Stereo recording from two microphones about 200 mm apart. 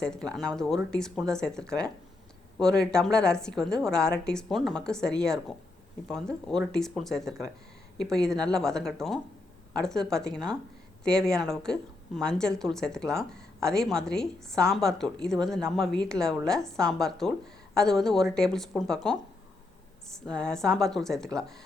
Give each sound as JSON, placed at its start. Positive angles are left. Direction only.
{"t": 0.0, "sound": "a woman's voice", "side_deg": 5}